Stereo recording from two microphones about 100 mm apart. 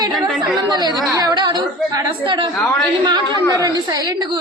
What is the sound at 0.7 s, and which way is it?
A woman's voice, 45° right (ahead or behind).